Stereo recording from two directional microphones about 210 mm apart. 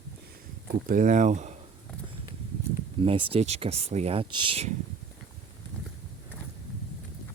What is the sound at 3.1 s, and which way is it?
Speech, 25° right (ahead or behind).